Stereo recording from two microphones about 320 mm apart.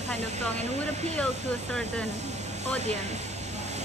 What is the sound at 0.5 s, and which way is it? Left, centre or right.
Speech, right.